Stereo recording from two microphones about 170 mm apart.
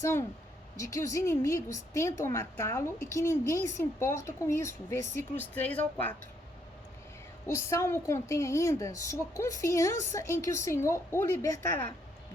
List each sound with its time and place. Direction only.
0.0 s a woman's voice: 15° left (ahead or behind)
7.4 s a woman's voice: 15° left (ahead or behind)